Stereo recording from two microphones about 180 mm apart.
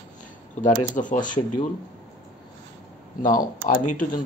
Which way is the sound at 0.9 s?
45° left (ahead or behind).